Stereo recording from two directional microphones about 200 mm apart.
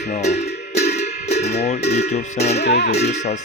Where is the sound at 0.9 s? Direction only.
35° left (ahead or behind).